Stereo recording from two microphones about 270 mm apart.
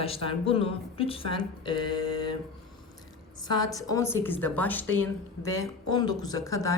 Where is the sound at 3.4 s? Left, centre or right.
Centre.